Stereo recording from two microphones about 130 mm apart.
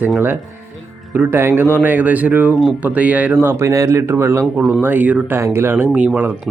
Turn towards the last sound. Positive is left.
turn(degrees=-15)  # may be behind; listen again after turning